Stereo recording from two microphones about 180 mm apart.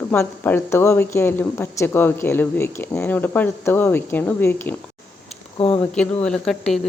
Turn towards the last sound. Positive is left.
turn(degrees=0)  # may be behind; listen again after turning